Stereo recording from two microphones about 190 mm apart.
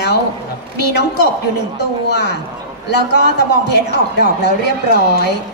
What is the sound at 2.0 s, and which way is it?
A woman's voice, 60° left (ahead or behind).